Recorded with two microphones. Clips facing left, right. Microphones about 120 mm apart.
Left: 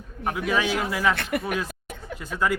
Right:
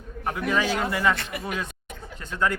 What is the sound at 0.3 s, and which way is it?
Speech, 5° left (ahead or behind).